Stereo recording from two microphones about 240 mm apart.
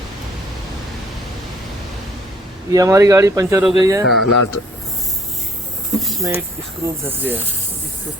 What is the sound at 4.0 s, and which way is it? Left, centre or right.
Speech, left.